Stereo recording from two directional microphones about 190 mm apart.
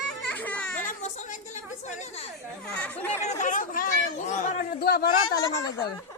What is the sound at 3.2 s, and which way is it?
Speech, 40° left (ahead or behind).